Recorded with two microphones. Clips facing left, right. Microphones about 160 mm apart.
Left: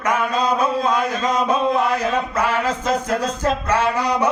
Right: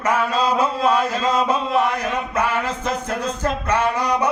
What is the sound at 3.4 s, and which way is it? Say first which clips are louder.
Speech: left 1 dB; 10° left (ahead or behind).